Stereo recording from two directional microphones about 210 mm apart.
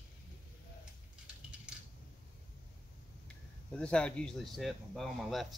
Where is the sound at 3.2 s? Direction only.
5° left (ahead or behind).